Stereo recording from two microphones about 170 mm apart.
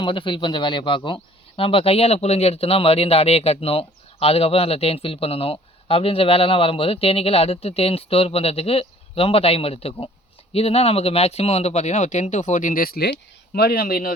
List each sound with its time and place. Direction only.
0.0 s speech: 30° left (ahead or behind); by 14.1 s 60° left (ahead or behind)